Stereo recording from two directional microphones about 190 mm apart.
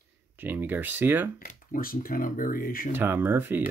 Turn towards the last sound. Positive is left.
turn(degrees=-10)  # may be behind; listen again after turning